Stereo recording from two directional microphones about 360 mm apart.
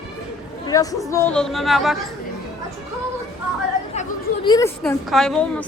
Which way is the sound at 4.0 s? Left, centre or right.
Centre.